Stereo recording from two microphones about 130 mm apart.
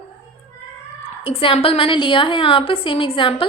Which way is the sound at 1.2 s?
45° left (ahead or behind).